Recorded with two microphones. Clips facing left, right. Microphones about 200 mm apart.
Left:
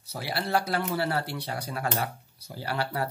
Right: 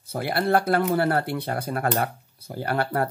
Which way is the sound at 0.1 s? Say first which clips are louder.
Right 6 dB; 55° right (ahead or behind).